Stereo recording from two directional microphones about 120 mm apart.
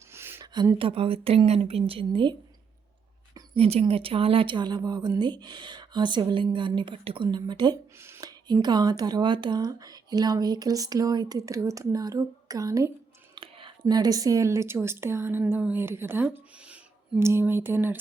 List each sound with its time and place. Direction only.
0.1 s a sound: 20° right (ahead or behind)
0.4 s a woman's voice: 35° right (ahead or behind)
3.5 s speech: 55° right (ahead or behind); by 7.8 s 35° right (ahead or behind)
7.9 s a sound: 20° right (ahead or behind)
8.3 s speech: 35° right (ahead or behind)
13.3 s whispering: 45° right (ahead or behind)
13.8 s speech: 35° right (ahead or behind)